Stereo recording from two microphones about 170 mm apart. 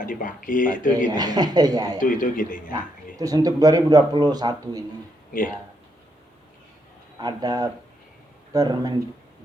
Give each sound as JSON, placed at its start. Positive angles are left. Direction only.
{"t": 0.0, "sound": "speech", "side_deg": 50}
{"t": 1.1, "sound": "a man's voice", "side_deg": -25}
{"t": 2.0, "sound": "speech", "side_deg": 50}
{"t": 3.2, "sound": "a man's voice", "side_deg": -20}
{"t": 7.2, "sound": "a man's voice", "side_deg": -25}